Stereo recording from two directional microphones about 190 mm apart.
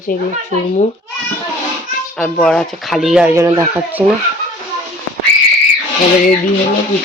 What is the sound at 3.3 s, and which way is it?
Speech, 15° right (ahead or behind).